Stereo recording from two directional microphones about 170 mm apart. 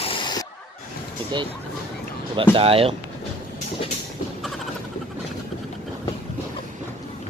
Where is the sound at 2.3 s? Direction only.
30° right (ahead or behind).